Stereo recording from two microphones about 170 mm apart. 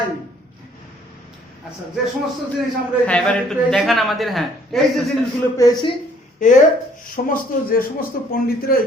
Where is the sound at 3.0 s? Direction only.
5° left (ahead or behind).